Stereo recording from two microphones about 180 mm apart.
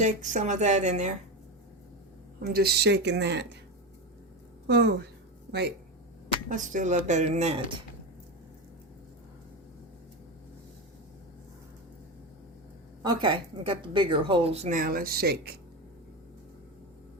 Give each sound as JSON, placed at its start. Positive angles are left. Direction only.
{"t": 0.0, "sound": "speech", "side_deg": -45}
{"t": 2.4, "sound": "speech", "side_deg": -60}
{"t": 4.6, "sound": "a woman's voice", "side_deg": -70}
{"t": 6.2, "sound": "speech", "side_deg": -45}
{"t": 13.0, "sound": "speech", "side_deg": -25}